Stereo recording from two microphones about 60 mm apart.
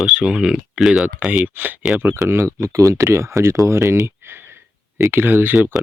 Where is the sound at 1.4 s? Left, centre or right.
Right.